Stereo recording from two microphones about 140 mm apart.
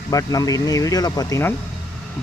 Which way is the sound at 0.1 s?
25° left (ahead or behind).